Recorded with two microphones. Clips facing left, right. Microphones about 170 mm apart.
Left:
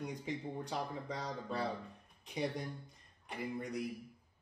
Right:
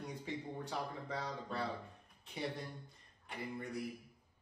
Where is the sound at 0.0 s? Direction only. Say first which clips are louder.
Left 3 dB; 15° left (ahead or behind).